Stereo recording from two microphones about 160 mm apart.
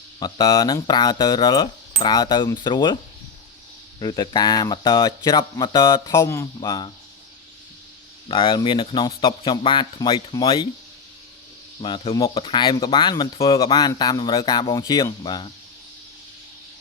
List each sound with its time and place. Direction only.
0.2 s speech: 25° left (ahead or behind)
4.0 s speech: 25° left (ahead or behind)
8.3 s speech: 30° left (ahead or behind)
11.8 s speech: 30° left (ahead or behind)